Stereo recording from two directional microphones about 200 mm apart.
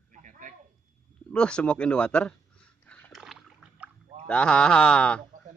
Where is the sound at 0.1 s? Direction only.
40° right (ahead or behind).